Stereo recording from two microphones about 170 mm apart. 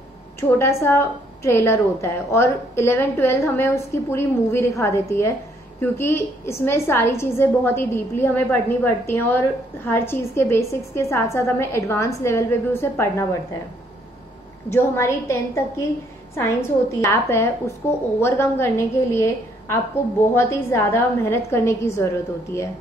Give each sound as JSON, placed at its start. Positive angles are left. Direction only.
{"t": 0.4, "sound": "a woman's voice", "side_deg": 15}
{"t": 14.7, "sound": "a woman's voice", "side_deg": 15}